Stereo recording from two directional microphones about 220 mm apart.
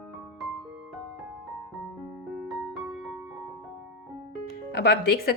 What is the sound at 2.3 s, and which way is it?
Music, centre (ahead or behind).